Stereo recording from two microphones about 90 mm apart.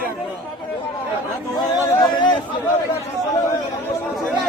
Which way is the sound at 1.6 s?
50° left (ahead or behind).